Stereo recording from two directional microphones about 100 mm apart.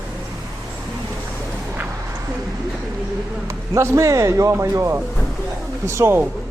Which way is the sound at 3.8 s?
30° right (ahead or behind).